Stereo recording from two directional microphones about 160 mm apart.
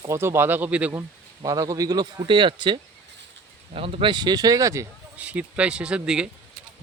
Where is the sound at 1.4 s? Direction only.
20° right (ahead or behind).